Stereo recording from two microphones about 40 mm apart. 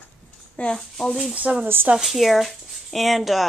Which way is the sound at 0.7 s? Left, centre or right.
Centre.